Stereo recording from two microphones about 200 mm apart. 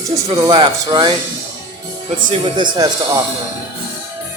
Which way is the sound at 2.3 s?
25° right (ahead or behind).